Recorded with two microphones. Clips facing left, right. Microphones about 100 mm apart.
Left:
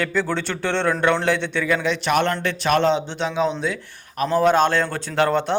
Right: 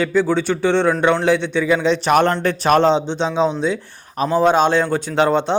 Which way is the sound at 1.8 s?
35° right (ahead or behind).